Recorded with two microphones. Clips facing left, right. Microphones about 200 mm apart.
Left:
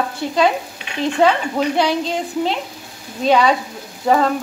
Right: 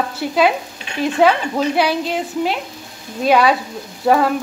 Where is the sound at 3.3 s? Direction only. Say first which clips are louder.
Right 1 dB; 5° right (ahead or behind).